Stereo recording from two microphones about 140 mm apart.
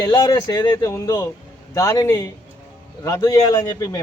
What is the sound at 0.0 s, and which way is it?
A man's voice, 25° left (ahead or behind).